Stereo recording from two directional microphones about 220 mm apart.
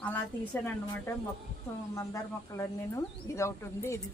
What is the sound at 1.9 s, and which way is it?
Speech, 15° left (ahead or behind).